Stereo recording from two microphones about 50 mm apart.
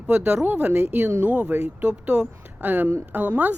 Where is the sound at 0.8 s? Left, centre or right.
Right.